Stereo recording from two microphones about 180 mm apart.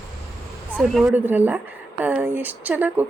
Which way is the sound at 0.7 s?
10° right (ahead or behind).